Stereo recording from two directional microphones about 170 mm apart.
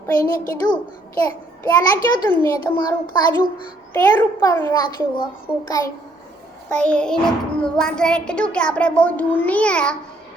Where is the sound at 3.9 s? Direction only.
10° left (ahead or behind).